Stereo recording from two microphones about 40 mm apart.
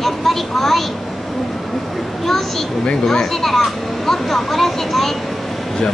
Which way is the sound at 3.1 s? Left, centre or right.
Centre.